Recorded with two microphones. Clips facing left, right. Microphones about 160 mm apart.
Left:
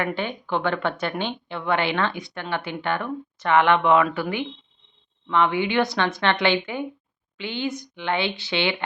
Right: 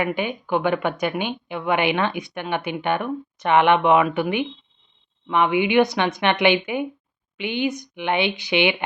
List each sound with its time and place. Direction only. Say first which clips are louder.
0.0 s a woman's voice: right 3 dB; 15° right (ahead or behind)